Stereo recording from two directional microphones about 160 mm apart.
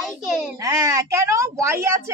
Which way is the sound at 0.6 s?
20° right (ahead or behind).